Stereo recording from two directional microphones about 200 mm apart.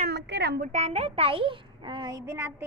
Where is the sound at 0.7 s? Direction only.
35° right (ahead or behind).